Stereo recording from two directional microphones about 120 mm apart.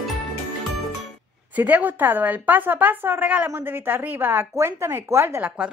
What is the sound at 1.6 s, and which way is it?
A woman's voice, 15° right (ahead or behind).